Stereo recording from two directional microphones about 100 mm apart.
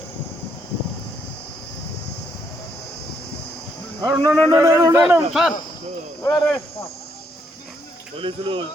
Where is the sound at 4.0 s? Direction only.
30° right (ahead or behind).